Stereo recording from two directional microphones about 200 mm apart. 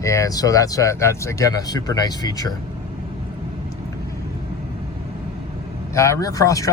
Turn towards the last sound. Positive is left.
turn(degrees=15)  # may be behind; listen again after turning